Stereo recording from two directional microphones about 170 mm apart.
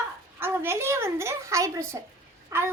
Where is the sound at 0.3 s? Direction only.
15° right (ahead or behind).